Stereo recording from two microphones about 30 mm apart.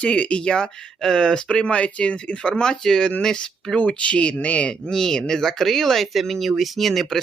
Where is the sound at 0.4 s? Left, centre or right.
Left.